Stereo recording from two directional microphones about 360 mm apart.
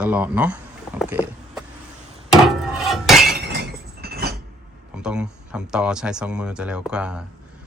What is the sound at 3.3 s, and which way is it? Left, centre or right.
Chink, right.